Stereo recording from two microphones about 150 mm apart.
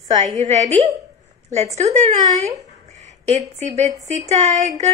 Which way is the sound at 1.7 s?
50° right (ahead or behind).